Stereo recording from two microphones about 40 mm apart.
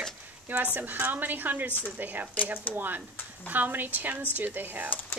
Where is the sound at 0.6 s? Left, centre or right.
Right.